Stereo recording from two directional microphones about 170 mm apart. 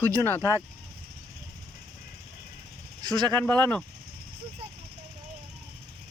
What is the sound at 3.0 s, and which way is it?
Speech, 25° right (ahead or behind).